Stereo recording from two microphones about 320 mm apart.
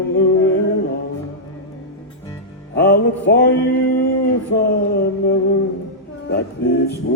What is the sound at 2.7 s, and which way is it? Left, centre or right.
Music, left.